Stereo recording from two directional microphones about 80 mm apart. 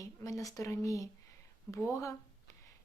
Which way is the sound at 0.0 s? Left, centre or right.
Left.